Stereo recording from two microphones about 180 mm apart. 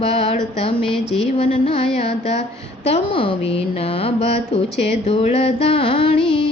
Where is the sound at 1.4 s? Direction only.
30° left (ahead or behind).